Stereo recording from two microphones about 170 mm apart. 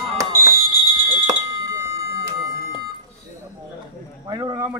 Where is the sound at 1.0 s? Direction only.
20° right (ahead or behind).